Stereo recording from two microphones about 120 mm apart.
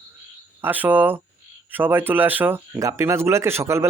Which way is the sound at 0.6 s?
15° right (ahead or behind).